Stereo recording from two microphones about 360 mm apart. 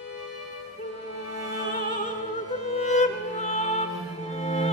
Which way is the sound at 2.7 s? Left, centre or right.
Centre.